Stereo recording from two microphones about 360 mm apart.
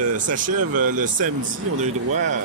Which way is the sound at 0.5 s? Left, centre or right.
Right.